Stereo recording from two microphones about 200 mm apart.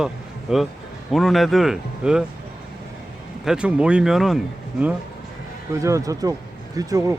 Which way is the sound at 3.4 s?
5° right (ahead or behind).